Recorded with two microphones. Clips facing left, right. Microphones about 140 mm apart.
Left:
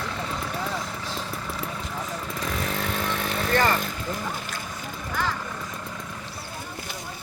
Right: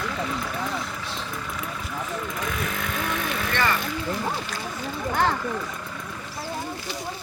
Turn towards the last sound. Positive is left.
turn(degrees=-60)  # may be behind; listen again after turning